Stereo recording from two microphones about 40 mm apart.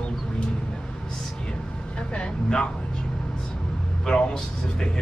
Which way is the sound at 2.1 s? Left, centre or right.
Left.